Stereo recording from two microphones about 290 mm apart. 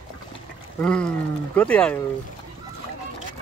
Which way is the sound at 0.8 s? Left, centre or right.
Centre.